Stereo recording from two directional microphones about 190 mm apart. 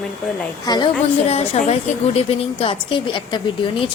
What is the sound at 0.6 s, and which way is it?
A woman's voice, 20° left (ahead or behind).